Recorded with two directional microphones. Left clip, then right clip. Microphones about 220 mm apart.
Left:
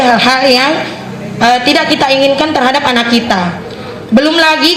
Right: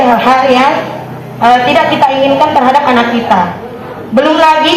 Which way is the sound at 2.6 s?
55° left (ahead or behind).